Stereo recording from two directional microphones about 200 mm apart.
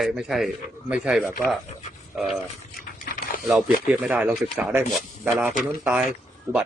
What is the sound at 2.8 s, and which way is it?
Dog, 45° left (ahead or behind).